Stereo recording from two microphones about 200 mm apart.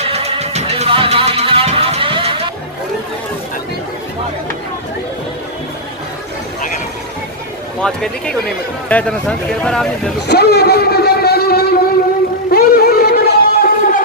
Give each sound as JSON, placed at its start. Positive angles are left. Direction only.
{"t": 0.0, "sound": "music", "side_deg": -30}
{"t": 7.8, "sound": "speech", "side_deg": 5}
{"t": 10.1, "sound": "a sound", "side_deg": 55}